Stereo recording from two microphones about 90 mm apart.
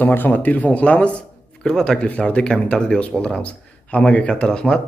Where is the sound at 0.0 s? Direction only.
20° left (ahead or behind).